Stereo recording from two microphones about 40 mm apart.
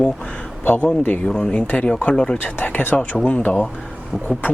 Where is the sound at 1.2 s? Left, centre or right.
Left.